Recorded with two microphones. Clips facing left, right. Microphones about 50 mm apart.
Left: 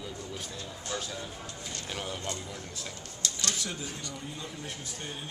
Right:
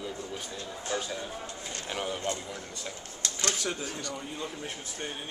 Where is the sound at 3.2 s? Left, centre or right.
Right.